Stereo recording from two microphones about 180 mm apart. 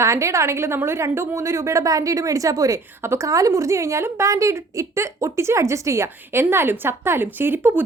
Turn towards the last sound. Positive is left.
turn(degrees=-10)  # may be behind; listen again after turning